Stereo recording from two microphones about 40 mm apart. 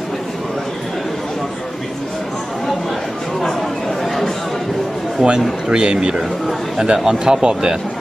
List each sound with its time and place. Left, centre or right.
4.0 s chatter: centre
5.2 s speech: centre
5.7 s a man's voice: right